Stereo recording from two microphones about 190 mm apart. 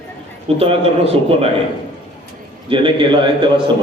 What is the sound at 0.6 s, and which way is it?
Speech, 30° right (ahead or behind).